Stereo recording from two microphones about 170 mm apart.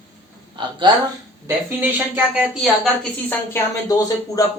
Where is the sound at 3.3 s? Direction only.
20° left (ahead or behind).